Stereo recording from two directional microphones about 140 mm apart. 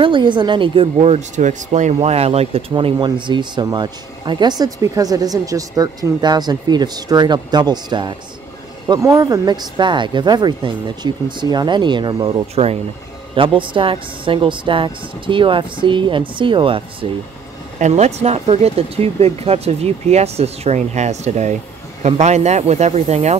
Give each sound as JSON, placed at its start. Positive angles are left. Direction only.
{"t": 0.0, "sound": "speech", "side_deg": -35}
{"t": 2.7, "sound": "speech", "side_deg": -35}
{"t": 17.7, "sound": "speech", "side_deg": -55}